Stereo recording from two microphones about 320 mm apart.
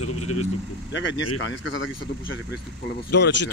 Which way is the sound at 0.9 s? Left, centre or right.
Left.